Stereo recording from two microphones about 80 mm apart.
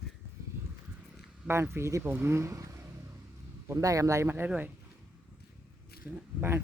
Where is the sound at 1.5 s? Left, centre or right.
Right.